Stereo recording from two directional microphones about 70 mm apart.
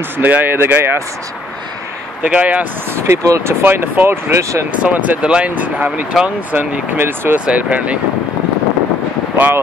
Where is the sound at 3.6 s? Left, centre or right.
Right.